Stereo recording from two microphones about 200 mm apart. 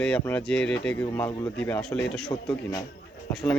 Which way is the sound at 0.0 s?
5° left (ahead or behind).